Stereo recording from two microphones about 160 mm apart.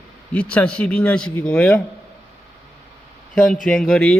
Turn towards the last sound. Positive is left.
turn(degrees=5)  # may be behind; listen again after turning